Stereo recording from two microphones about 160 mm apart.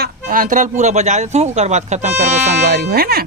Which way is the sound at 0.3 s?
55° right (ahead or behind).